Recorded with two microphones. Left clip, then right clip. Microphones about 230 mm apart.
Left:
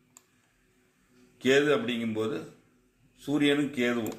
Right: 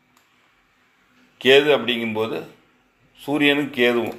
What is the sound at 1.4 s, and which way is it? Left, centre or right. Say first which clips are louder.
A man's voice: right 9 dB; right.